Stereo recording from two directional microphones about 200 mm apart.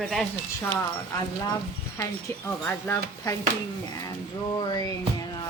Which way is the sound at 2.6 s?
10° left (ahead or behind).